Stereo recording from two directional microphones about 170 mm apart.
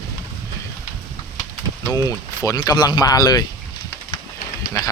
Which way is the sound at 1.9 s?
20° left (ahead or behind).